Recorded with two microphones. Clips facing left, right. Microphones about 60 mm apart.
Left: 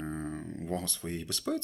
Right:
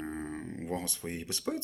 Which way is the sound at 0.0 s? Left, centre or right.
Centre.